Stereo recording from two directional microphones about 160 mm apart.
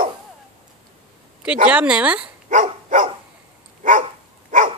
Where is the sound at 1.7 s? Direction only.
5° right (ahead or behind).